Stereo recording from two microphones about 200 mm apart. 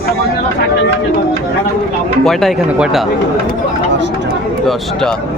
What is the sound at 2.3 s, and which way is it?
Speech, centre (ahead or behind).